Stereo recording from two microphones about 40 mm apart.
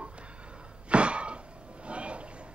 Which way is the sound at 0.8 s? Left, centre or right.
Right.